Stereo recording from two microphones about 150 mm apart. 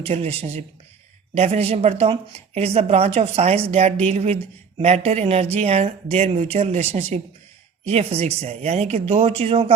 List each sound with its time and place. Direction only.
0.0 s speech: 40° right (ahead or behind)